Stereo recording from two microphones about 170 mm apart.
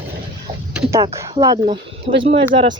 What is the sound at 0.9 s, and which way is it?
Speech, 15° right (ahead or behind).